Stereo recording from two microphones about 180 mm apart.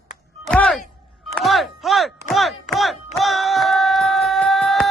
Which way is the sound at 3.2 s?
Centre (ahead or behind).